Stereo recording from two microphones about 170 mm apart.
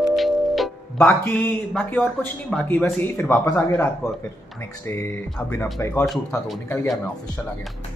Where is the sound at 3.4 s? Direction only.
15° left (ahead or behind).